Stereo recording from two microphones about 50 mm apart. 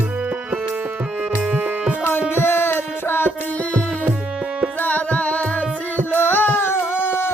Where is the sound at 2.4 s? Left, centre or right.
Left.